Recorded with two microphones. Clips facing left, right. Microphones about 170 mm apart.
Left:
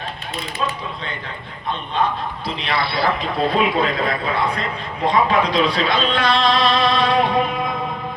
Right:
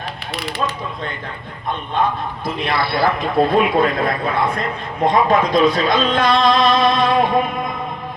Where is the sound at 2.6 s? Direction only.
50° right (ahead or behind).